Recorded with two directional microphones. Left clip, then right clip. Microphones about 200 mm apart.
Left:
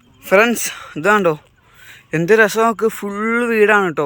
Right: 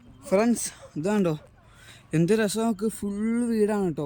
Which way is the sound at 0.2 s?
25° left (ahead or behind).